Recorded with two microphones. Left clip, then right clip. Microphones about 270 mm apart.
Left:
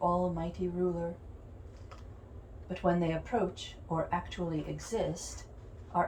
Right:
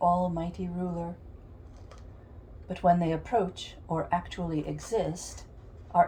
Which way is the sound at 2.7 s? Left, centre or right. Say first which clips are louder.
Right 6 dB; right.